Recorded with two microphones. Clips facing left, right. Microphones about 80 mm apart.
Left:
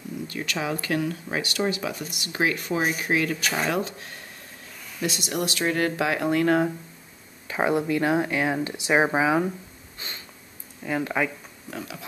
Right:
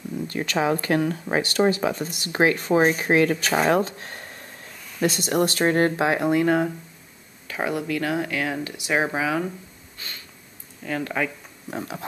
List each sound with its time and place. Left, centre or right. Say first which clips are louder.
0.3 s speech: right 7 dB; right
6.2 s speech: left 1 dB; centre
7.4 s speech: left 3 dB; left
9.9 s snort: even; left
10.8 s speech: left 1 dB; centre
11.7 s speech: right 5 dB; right